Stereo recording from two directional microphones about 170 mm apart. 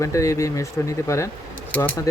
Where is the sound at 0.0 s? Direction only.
20° left (ahead or behind).